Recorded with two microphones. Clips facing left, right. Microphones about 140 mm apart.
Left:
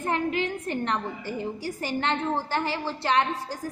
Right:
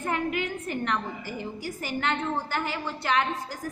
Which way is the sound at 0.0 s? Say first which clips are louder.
Left 2 dB; 30° left (ahead or behind).